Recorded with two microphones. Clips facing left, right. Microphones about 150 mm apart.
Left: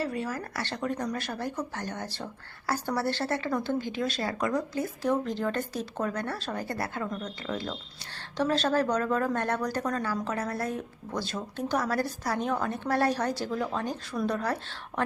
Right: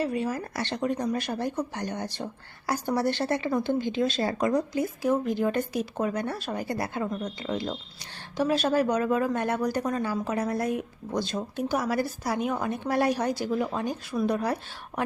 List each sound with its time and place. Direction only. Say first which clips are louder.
0.0 s speech: right 4 dB; 20° right (ahead or behind)